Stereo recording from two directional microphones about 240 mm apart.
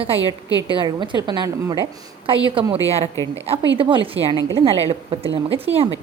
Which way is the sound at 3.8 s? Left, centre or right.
Right.